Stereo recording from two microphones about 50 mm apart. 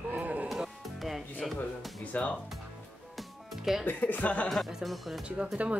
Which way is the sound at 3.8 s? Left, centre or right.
Left.